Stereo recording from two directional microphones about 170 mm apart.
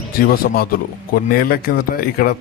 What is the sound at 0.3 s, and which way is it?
Speech, 60° left (ahead or behind).